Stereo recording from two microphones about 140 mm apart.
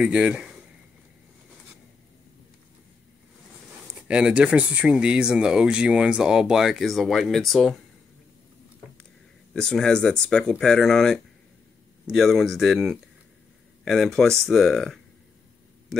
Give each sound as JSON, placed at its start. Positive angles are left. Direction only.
{"t": 0.0, "sound": "speech", "side_deg": -10}
{"t": 4.1, "sound": "speech", "side_deg": -5}
{"t": 9.5, "sound": "speech", "side_deg": 5}